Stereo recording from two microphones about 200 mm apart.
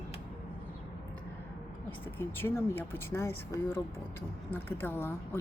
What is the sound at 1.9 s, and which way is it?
Speech, 10° left (ahead or behind).